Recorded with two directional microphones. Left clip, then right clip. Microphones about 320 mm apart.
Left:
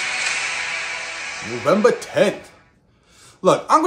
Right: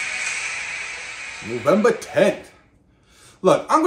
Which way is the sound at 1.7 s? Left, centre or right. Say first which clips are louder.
Left 1 dB; centre.